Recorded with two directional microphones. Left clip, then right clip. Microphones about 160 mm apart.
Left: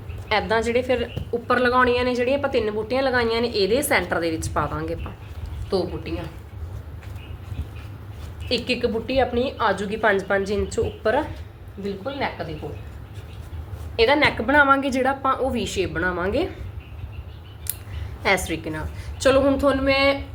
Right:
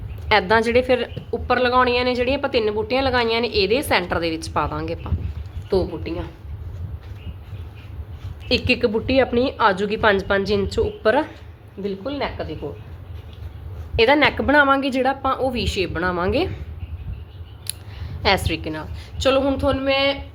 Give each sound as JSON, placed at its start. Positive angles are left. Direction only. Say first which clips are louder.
{"t": 0.3, "sound": "a woman's voice", "louder": "right 4 dB", "side_deg": -45}
{"t": 1.3, "sound": "a woman's voice", "louder": "right 1 dB", "side_deg": -25}
{"t": 5.7, "sound": "speech", "louder": "right 3 dB", "side_deg": -65}
{"t": 8.4, "sound": "a woman's voice", "louder": "right 4 dB", "side_deg": -55}
{"t": 11.8, "sound": "speech", "louder": "right 1 dB", "side_deg": -65}
{"t": 13.9, "sound": "a woman's voice", "louder": "right 2 dB", "side_deg": -65}
{"t": 18.4, "sound": "a woman's voice", "louder": "right 2 dB", "side_deg": -30}